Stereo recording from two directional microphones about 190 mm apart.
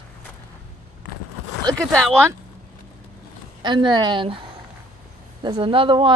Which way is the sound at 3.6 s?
25° right (ahead or behind).